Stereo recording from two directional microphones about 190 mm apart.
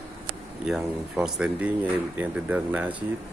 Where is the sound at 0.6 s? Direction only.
5° right (ahead or behind).